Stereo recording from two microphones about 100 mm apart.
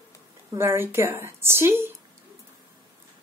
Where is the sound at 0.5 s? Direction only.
25° right (ahead or behind).